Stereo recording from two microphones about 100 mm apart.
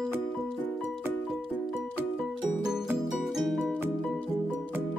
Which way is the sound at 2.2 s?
5° right (ahead or behind).